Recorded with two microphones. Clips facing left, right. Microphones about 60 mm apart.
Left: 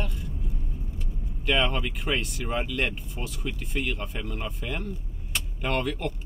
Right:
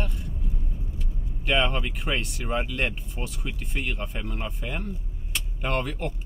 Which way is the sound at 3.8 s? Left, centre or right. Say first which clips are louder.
Even; centre.